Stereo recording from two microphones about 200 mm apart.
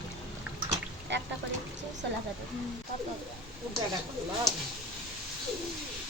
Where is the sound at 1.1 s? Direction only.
65° right (ahead or behind).